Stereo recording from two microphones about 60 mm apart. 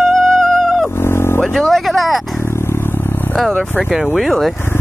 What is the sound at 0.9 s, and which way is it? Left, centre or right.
Vehicle, left.